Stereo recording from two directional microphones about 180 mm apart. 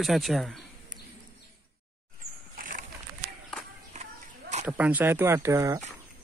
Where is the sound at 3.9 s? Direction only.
40° right (ahead or behind).